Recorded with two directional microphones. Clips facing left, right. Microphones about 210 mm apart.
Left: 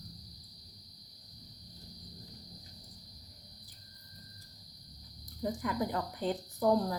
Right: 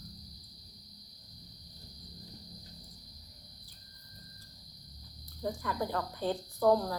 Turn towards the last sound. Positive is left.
turn(degrees=15)  # may be behind; listen again after turning